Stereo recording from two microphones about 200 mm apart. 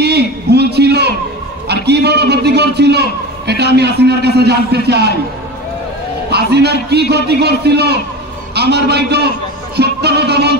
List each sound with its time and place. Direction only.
0.0 s a sound: 55° right (ahead or behind)
1.9 s a man's voice: 55° right (ahead or behind)
6.3 s a man's voice: 55° right (ahead or behind)
9.8 s music: 55° right (ahead or behind)